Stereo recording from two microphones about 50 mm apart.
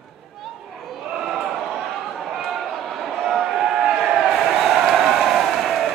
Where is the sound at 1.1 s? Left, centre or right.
Centre.